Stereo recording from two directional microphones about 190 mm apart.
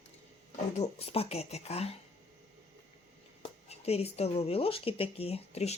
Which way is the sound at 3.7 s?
30° left (ahead or behind).